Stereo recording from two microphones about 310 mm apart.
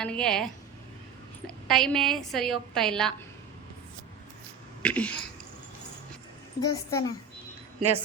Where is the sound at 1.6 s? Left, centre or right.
Centre.